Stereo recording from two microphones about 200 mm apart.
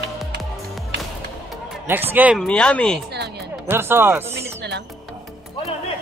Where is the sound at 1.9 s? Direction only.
10° right (ahead or behind).